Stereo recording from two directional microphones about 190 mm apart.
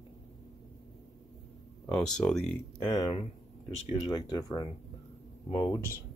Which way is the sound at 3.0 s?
30° left (ahead or behind).